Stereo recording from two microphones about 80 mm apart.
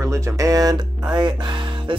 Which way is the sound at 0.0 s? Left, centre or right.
Right.